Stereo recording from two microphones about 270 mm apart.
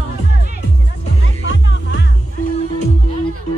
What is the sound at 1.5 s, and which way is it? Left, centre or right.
Music, left.